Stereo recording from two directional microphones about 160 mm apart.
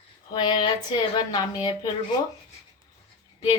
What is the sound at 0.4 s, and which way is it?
Speech, 30° left (ahead or behind).